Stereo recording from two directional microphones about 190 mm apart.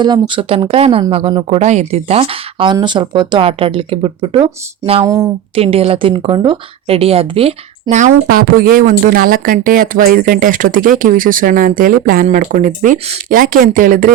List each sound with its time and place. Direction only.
0.0 s speech: 25° right (ahead or behind)
5.0 s speech: 15° right (ahead or behind)
5.5 s speech: 30° right (ahead or behind); by 14.1 s 45° right (ahead or behind)